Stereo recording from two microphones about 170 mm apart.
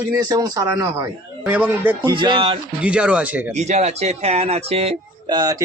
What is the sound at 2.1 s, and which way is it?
Speech, 30° right (ahead or behind).